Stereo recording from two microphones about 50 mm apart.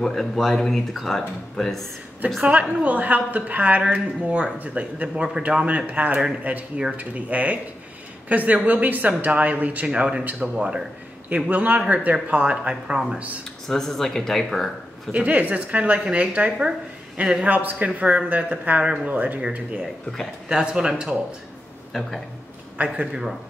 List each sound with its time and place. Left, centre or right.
0.0 s speech: centre
2.2 s speech: right
5.1 s speech: centre
5.7 s speech: right
13.7 s speech: centre
15.1 s speech: right
20.4 s speech: centre
21.9 s speech: centre
22.9 s speech: centre